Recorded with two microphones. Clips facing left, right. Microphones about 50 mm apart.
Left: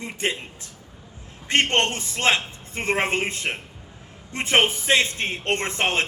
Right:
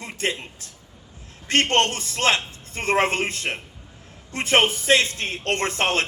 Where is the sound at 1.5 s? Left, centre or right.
Left.